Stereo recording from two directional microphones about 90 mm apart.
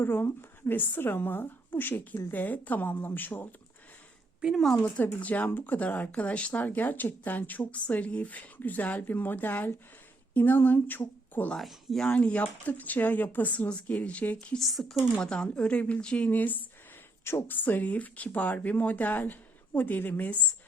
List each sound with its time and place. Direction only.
0.0 s speech: 25° left (ahead or behind)
4.4 s a woman's voice: 10° right (ahead or behind)
5.2 s speech: 20° left (ahead or behind)
11.5 s speech: 5° left (ahead or behind)
12.0 s speech: 15° left (ahead or behind)
14.6 s speech: centre (ahead or behind); by 20.4 s 20° left (ahead or behind)